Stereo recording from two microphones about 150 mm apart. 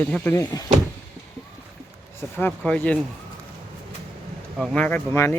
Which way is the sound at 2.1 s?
15° left (ahead or behind).